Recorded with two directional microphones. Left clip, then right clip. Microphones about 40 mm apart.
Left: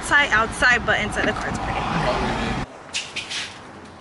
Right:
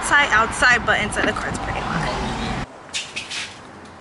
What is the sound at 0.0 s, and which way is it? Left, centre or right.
Speech, centre.